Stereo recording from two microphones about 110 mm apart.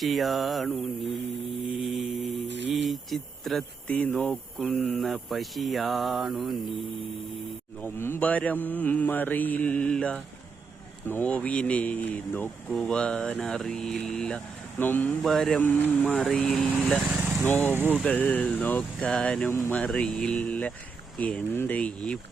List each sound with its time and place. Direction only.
0.0 s speech: centre (ahead or behind)
1.8 s mantra: centre (ahead or behind)
3.9 s mantra: 15° left (ahead or behind)
4.3 s speech: centre (ahead or behind)
7.8 s mantra: 20° left (ahead or behind)
15.2 s speech: 5° left (ahead or behind)
15.6 s mantra: 15° left (ahead or behind)
16.1 s speech: 5° left (ahead or behind)
17.2 s speech: 15° right (ahead or behind)
17.4 s mantra: 15° left (ahead or behind)
17.7 s speech: 15° right (ahead or behind)
18.0 s mantra: 15° left (ahead or behind)
19.5 s speech: 20° left (ahead or behind)
19.7 s mantra: 10° left (ahead or behind)